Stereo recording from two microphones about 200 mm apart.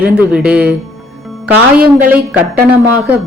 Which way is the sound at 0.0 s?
5° right (ahead or behind).